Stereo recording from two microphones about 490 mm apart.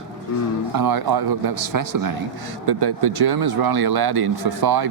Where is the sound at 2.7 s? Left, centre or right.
Right.